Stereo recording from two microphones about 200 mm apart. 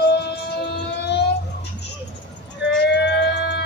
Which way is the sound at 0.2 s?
55° left (ahead or behind).